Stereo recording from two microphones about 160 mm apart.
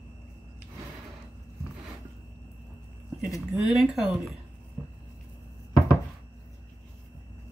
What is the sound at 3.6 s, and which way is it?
Speech, centre (ahead or behind).